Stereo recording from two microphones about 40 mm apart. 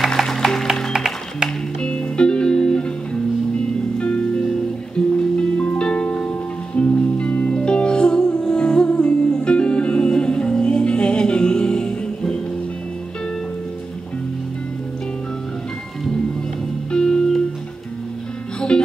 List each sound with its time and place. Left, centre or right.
0.2 s music: centre
0.9 s music: centre
1.8 s music: left
4.0 s music: left
16.9 s music: left
18.7 s music: left